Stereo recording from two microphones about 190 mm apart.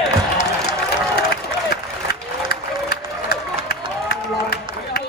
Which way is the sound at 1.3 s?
60° left (ahead or behind).